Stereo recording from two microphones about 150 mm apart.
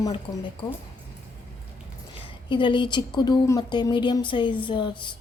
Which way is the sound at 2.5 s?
35° left (ahead or behind).